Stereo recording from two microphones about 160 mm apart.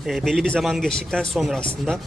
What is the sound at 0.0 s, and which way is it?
Speech, centre (ahead or behind).